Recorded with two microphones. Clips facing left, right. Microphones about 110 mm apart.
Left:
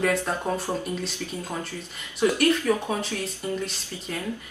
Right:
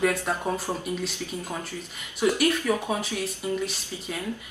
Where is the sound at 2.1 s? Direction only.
10° right (ahead or behind).